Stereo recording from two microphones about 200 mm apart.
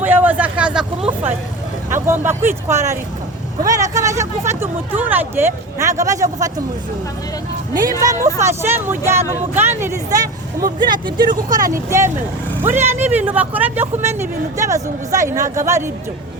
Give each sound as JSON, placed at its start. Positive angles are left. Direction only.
{"t": 0.0, "sound": "a sound", "side_deg": -10}
{"t": 1.9, "sound": "speech", "side_deg": -10}
{"t": 7.7, "sound": "speech", "side_deg": -20}
{"t": 11.4, "sound": "speech", "side_deg": -45}
{"t": 11.7, "sound": "speech", "side_deg": -15}